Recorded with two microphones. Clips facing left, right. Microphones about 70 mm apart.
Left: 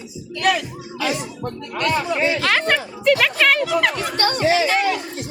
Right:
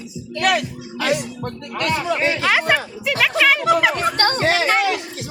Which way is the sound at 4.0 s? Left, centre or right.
Right.